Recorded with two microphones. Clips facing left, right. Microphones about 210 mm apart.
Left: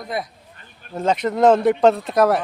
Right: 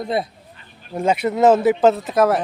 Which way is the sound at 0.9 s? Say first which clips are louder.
Right 1 dB; 10° right (ahead or behind).